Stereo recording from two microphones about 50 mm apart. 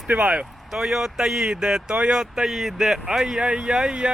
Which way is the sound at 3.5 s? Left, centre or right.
Right.